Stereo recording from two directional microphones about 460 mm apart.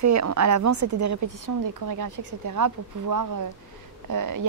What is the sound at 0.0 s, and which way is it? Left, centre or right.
A woman's voice, right.